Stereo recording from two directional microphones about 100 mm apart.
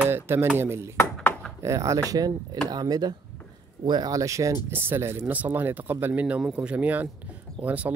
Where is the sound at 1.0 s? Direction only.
20° left (ahead or behind).